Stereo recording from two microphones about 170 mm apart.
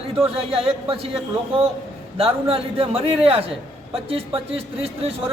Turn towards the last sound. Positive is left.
turn(degrees=-35)  # may be behind; listen again after turning